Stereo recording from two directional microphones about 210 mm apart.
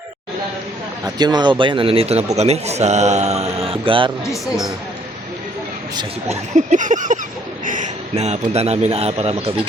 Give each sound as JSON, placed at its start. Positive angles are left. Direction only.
{"t": 1.0, "sound": "a man's voice", "side_deg": -20}
{"t": 4.3, "sound": "speech", "side_deg": 15}
{"t": 6.0, "sound": "a man's voice", "side_deg": -35}